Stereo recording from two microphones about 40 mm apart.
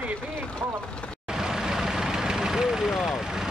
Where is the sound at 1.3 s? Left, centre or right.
Centre.